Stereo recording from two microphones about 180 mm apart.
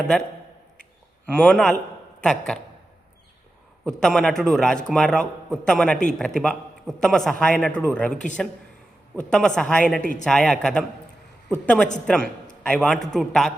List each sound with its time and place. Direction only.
1.3 s a man's voice: 5° left (ahead or behind)
3.8 s a man's voice: 5° left (ahead or behind)